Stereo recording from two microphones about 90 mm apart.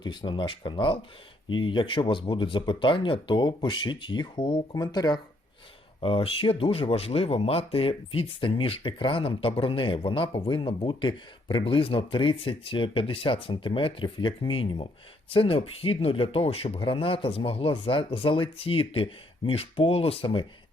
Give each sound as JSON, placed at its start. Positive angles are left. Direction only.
{"t": 0.0, "sound": "speech", "side_deg": 65}
{"t": 4.7, "sound": "speech", "side_deg": 50}
{"t": 6.0, "sound": "speech", "side_deg": 90}